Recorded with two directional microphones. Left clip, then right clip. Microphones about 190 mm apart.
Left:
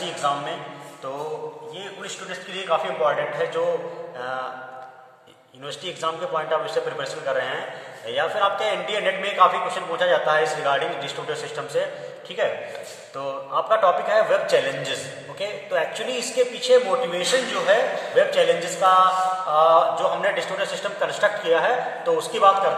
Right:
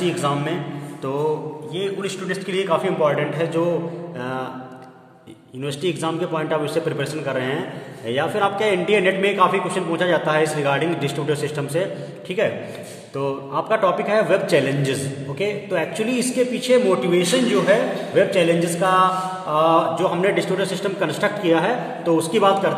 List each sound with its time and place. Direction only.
1.8 s a man's voice: 45° right (ahead or behind)
5.7 s a man's voice: 40° right (ahead or behind)